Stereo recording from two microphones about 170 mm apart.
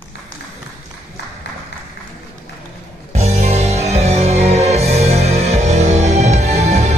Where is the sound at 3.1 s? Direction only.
40° right (ahead or behind).